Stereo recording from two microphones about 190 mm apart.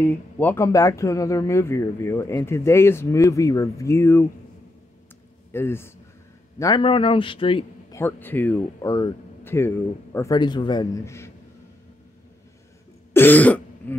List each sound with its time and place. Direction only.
0.0 s speech: 10° left (ahead or behind)
5.5 s speech: 10° left (ahead or behind)
6.6 s speech: 25° left (ahead or behind)
7.9 s speech: 10° left (ahead or behind)
13.1 s throat clearing: 10° left (ahead or behind)